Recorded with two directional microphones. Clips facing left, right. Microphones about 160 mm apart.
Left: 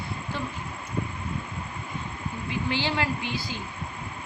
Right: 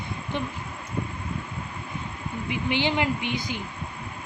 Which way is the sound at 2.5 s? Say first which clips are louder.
Right 3 dB; 20° right (ahead or behind).